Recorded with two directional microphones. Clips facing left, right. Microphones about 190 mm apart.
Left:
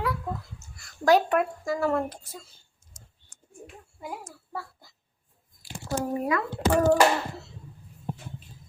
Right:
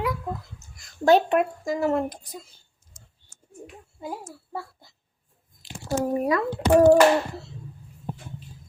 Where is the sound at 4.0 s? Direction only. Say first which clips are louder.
Right 3 dB; 25° right (ahead or behind).